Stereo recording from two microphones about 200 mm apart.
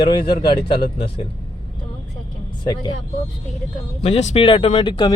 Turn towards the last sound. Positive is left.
turn(degrees=20)  # may be behind; listen again after turning